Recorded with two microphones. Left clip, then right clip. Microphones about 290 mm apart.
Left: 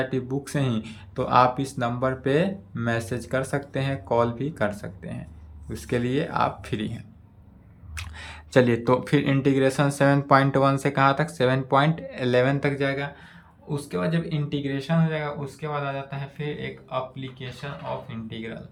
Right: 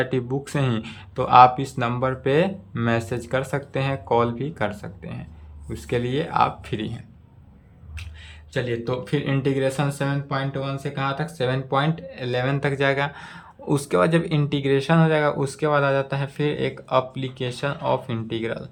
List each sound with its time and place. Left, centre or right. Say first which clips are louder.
0.0 s speech: right 3 dB; centre
7.9 s speech: left 5 dB; centre